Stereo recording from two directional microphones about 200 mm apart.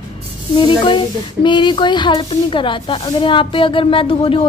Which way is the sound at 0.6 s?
25° left (ahead or behind).